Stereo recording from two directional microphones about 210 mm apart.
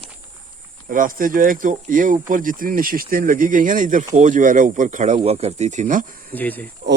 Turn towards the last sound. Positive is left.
turn(degrees=10)  # may be behind; listen again after turning